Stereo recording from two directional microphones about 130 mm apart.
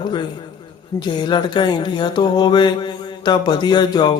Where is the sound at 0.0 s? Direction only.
35° left (ahead or behind).